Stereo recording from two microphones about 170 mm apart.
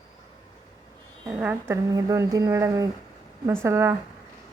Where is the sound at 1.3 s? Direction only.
10° right (ahead or behind).